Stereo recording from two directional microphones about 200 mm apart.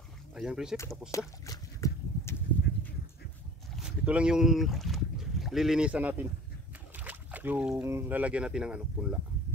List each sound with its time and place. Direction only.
0.3 s speech: 5° right (ahead or behind)
1.1 s a sound: 15° left (ahead or behind)
3.8 s speech: 5° right (ahead or behind)